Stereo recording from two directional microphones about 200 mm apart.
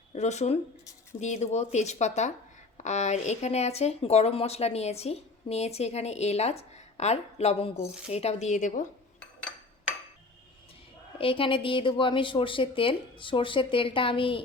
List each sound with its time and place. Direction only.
0.1 s speech: 35° left (ahead or behind)
11.2 s a woman's voice: 25° left (ahead or behind)